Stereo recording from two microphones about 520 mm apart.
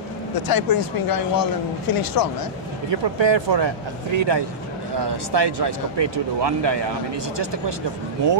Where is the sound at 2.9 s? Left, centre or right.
Right.